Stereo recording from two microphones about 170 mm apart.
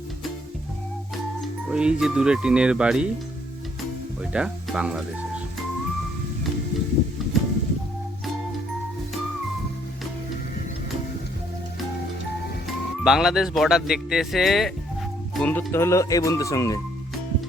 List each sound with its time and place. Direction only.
1.7 s speech: 5° right (ahead or behind)
4.2 s speech: 5° right (ahead or behind)
7.3 s music: centre (ahead or behind)
12.6 s speech: centre (ahead or behind); by 16.8 s 20° left (ahead or behind)